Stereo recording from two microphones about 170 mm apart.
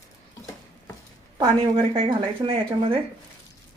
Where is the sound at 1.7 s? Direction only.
30° right (ahead or behind).